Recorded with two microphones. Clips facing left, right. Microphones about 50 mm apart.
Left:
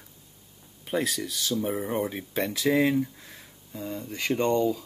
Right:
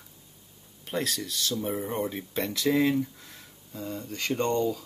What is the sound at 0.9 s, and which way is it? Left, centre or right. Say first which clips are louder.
Speech: left 3 dB; centre.